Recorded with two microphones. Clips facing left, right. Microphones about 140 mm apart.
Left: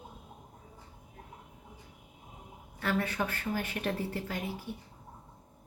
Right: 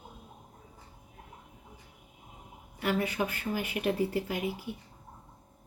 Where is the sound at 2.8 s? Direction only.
15° right (ahead or behind).